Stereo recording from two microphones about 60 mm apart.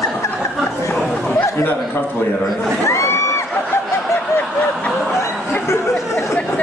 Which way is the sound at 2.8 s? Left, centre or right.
Left.